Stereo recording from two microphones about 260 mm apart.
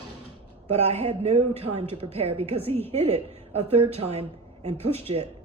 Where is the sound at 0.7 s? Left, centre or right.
Right.